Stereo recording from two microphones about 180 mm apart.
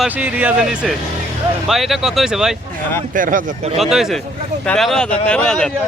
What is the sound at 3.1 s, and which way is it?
Speech, 45° right (ahead or behind).